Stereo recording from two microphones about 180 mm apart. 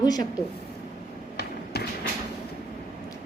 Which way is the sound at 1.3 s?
60° left (ahead or behind).